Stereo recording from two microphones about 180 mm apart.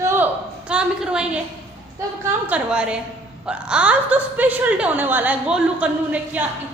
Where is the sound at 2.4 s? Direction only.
5° right (ahead or behind).